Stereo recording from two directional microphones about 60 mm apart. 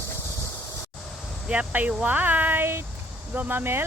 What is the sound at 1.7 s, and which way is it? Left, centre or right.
Speech, right.